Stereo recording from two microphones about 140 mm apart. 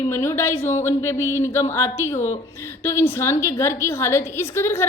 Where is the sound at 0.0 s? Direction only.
15° left (ahead or behind).